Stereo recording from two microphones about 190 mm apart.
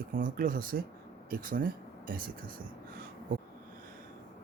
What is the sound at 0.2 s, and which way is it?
Speech, 45° right (ahead or behind).